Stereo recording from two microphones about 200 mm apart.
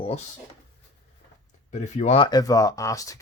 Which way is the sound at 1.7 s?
35° left (ahead or behind).